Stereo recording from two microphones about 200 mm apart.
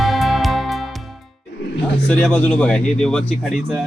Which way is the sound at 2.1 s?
5° left (ahead or behind).